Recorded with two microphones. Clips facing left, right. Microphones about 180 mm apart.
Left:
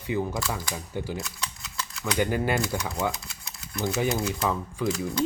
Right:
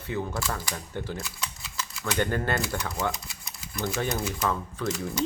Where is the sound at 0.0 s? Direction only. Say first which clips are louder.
Left 3 dB; 15° left (ahead or behind).